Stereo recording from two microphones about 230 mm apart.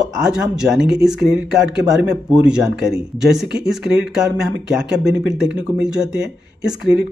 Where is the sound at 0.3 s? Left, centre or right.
Centre.